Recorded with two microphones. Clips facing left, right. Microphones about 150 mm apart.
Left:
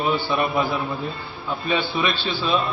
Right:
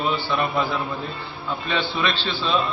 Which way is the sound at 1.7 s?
10° left (ahead or behind).